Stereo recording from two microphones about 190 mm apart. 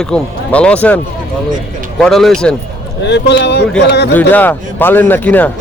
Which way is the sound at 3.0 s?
65° left (ahead or behind).